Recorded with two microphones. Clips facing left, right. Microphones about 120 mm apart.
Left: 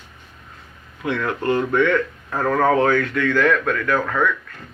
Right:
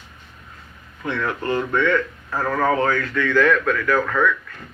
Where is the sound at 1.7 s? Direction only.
60° left (ahead or behind).